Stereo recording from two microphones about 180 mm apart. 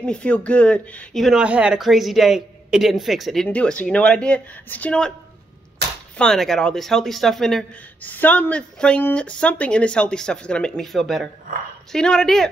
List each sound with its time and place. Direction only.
0.0 s speech: 5° left (ahead or behind)
6.1 s speech: 5° left (ahead or behind)